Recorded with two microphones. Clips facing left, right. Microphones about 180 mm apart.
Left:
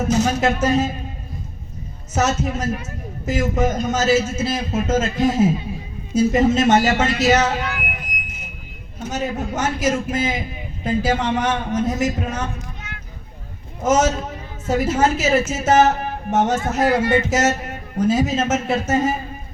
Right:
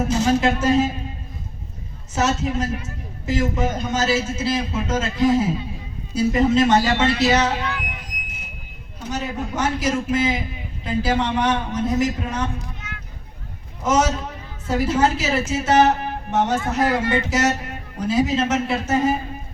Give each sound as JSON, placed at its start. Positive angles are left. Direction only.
{"t": 0.1, "sound": "speech", "side_deg": 40}
{"t": 2.1, "sound": "a man's voice", "side_deg": 40}
{"t": 9.0, "sound": "a man's voice", "side_deg": 45}
{"t": 13.8, "sound": "a man's voice", "side_deg": 45}